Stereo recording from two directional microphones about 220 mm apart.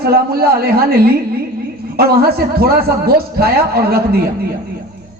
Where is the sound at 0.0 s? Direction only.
45° right (ahead or behind).